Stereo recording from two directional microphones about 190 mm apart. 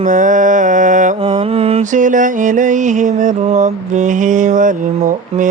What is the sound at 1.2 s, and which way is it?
Mantra, 30° right (ahead or behind).